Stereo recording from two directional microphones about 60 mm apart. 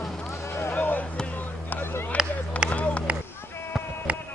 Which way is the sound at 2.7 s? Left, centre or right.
Left.